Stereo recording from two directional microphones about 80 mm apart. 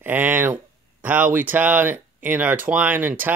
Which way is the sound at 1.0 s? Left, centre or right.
Right.